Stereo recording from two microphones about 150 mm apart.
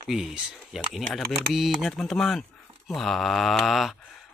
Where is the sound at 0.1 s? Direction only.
5° right (ahead or behind).